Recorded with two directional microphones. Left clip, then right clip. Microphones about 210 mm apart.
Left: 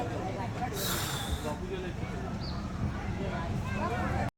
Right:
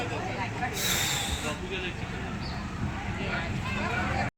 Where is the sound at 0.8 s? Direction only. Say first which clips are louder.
Right 8 dB; 55° left (ahead or behind).